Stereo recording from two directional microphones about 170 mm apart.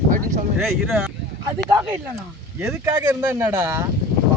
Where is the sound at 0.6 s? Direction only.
Centre (ahead or behind).